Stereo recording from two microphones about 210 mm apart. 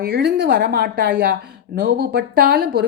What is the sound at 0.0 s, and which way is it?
Speech, 50° right (ahead or behind).